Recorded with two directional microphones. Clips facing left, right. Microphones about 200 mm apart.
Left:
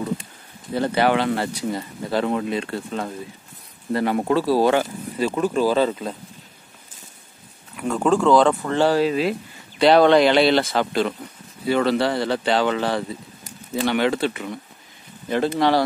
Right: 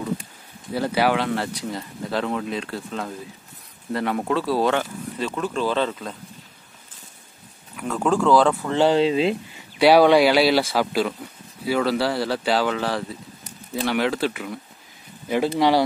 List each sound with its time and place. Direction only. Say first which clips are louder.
0.7 s speech: left 2 dB; 5° right (ahead or behind)
7.7 s speech: left 2 dB; centre (ahead or behind)
8.7 s speech: right 2 dB; 20° right (ahead or behind)
9.8 s speech: even; 10° right (ahead or behind)